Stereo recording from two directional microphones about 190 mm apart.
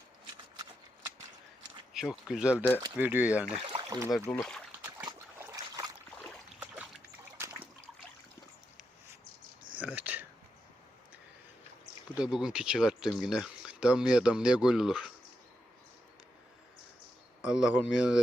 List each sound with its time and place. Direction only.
1.9 s speech: 5° right (ahead or behind)
3.6 s speech: 25° right (ahead or behind)
4.3 s speech: 5° left (ahead or behind)
5.0 s trickle: 20° right (ahead or behind)
7.3 s water: 15° right (ahead or behind)
9.7 s a sound: 10° right (ahead or behind)
12.1 s speech: 5° right (ahead or behind)
17.4 s speech: 5° right (ahead or behind)